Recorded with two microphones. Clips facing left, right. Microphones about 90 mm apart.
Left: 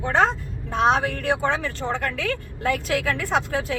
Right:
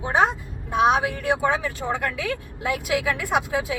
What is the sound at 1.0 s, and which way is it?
Speech, 60° left (ahead or behind).